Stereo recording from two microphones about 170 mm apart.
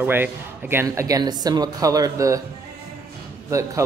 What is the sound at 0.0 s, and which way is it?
Speech, 10° right (ahead or behind).